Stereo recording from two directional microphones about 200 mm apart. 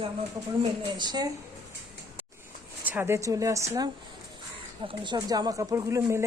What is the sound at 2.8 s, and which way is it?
Speech, 10° right (ahead or behind).